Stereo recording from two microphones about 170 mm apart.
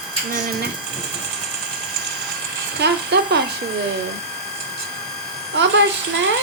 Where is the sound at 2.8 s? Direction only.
80° right.